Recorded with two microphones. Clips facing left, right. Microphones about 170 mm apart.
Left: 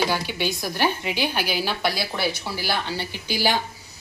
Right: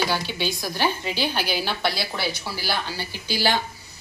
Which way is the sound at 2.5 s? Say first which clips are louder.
Left 2 dB; 20° left (ahead or behind).